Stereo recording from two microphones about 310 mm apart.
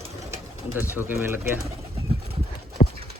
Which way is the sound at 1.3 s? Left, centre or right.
Centre.